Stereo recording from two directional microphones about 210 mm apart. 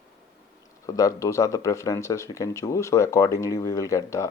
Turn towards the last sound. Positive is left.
turn(degrees=15)  # may be behind; listen again after turning